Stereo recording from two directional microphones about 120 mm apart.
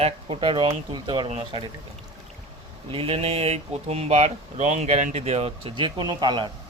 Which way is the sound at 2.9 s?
50° right (ahead or behind).